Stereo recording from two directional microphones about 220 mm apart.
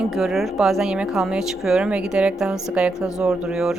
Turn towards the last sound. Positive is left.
turn(degrees=-5)  # may be behind; listen again after turning